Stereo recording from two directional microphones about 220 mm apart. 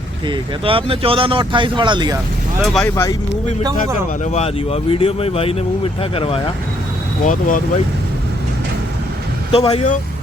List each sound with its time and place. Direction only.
0.3 s speech: 25° right (ahead or behind)
2.6 s speech: 5° left (ahead or behind)
2.9 s speech: 15° left (ahead or behind)
3.6 s speech: 20° right (ahead or behind)
4.2 s speech: 30° left (ahead or behind)
7.3 s speech: 35° left (ahead or behind)
9.5 s speech: 25° left (ahead or behind)